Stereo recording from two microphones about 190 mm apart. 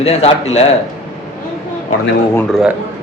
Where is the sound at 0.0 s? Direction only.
35° left (ahead or behind).